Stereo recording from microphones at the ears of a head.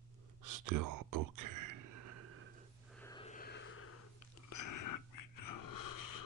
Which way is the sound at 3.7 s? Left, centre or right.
Left.